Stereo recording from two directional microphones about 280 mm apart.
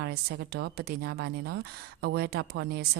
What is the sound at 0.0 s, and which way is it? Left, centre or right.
Speech, right.